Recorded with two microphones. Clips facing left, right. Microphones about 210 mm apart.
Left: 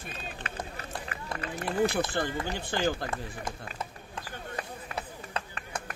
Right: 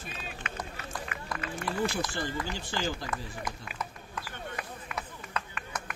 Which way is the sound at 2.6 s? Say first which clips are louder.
Left 4 dB; 55° left (ahead or behind).